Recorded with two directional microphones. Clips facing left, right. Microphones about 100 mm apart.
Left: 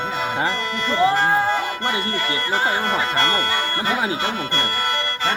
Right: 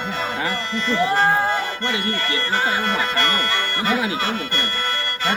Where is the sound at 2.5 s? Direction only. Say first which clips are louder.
Left 1 dB; 20° left (ahead or behind).